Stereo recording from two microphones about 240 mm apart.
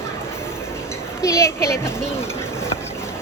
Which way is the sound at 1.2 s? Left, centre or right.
Centre.